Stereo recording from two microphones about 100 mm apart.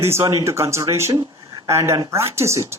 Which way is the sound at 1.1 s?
40° right (ahead or behind).